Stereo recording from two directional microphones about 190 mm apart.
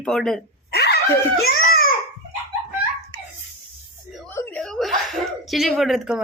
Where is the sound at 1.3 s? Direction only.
55° left (ahead or behind).